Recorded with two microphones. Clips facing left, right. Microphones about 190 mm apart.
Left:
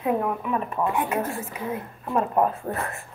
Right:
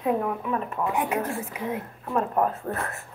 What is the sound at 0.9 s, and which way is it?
Speech, 15° right (ahead or behind).